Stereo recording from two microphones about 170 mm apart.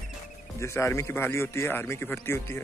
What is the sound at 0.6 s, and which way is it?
A man's voice, 15° left (ahead or behind).